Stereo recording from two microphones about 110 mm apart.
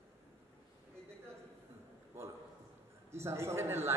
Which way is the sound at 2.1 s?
25° right (ahead or behind).